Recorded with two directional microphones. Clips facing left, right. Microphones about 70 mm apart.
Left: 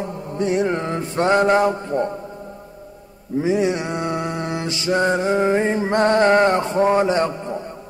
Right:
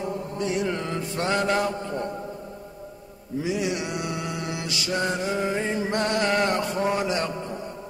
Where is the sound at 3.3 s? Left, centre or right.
Left.